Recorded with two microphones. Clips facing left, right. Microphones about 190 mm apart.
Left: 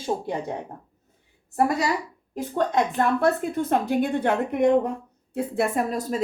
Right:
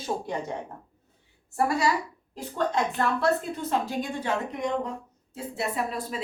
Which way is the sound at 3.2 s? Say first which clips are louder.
Left 4 dB; 55° left (ahead or behind).